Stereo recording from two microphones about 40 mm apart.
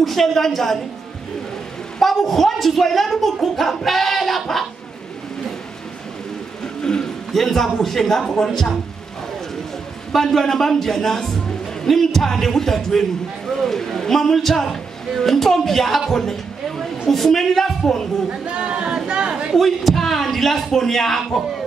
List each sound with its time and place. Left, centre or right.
0.0 s a woman's voice: centre
2.0 s a woman's voice: centre
6.6 s a sound: centre
7.3 s a man's voice: centre
10.1 s a man's voice: centre
18.6 s speech: right
19.0 s chatter: right
19.5 s a man's voice: centre